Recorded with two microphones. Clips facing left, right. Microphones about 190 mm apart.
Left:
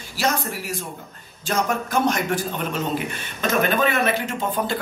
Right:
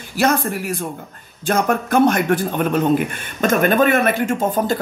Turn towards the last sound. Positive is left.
turn(degrees=-45)  # may be behind; listen again after turning